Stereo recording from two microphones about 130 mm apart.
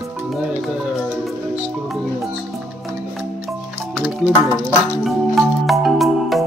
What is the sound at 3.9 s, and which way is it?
Speech, 5° right (ahead or behind).